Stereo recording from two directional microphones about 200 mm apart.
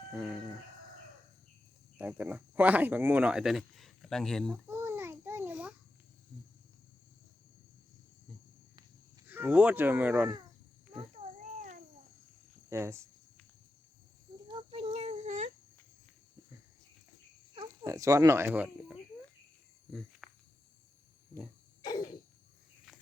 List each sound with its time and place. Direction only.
0.2 s speech: 5° right (ahead or behind)
2.0 s speech: 5° right (ahead or behind)
4.5 s babbling: 10° right (ahead or behind)
9.2 s speech: 10° right (ahead or behind)
11.1 s a sound: 35° right (ahead or behind)
12.7 s speech: 15° right (ahead or behind)
14.4 s a sound: 25° right (ahead or behind)
17.5 s speech: 20° right (ahead or behind)
19.9 s cricket: centre (ahead or behind)
21.8 s a sound: 20° left (ahead or behind)